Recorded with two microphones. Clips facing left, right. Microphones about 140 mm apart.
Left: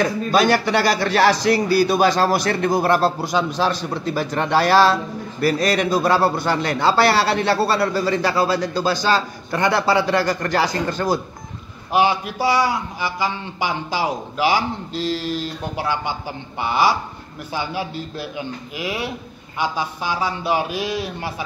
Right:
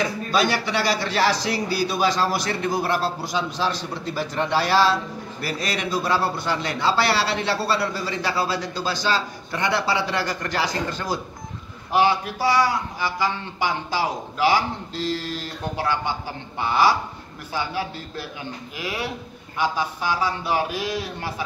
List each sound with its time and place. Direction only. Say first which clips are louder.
0.0 s a man's voice: left 5 dB; 50° left (ahead or behind)
11.9 s speech: left 2 dB; 15° left (ahead or behind)